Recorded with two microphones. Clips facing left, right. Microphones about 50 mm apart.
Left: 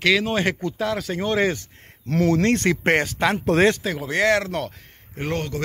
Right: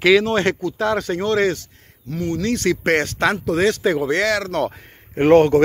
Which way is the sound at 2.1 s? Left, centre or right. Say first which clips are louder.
Left 4 dB; left.